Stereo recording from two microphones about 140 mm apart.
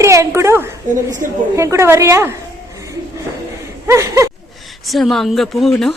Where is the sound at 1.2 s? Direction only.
75° right (ahead or behind).